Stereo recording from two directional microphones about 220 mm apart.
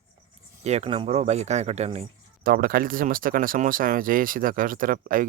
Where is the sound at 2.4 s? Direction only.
40° right (ahead or behind).